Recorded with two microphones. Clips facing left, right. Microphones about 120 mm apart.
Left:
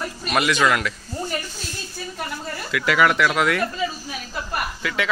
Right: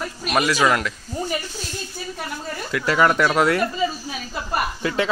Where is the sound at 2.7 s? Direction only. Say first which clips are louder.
Right 1 dB; 35° right (ahead or behind).